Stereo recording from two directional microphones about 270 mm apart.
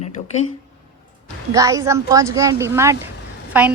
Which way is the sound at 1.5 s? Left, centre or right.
Centre.